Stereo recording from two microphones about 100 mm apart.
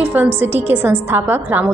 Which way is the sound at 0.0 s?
15° right (ahead or behind).